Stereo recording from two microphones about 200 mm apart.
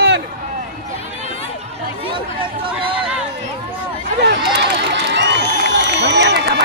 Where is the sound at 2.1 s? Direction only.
25° right (ahead or behind).